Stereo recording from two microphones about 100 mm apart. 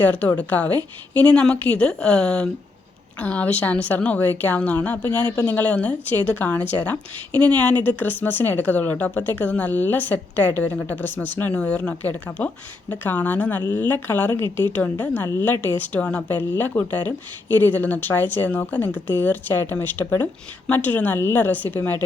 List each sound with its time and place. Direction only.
0.0 s speech: 15° left (ahead or behind)